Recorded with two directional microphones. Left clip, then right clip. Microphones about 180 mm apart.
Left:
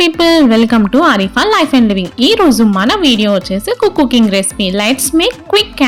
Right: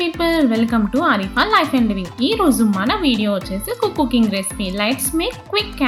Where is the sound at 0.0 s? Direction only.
55° left (ahead or behind).